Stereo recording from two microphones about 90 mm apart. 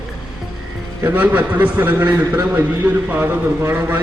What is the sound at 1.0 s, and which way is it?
A man's voice, 20° right (ahead or behind).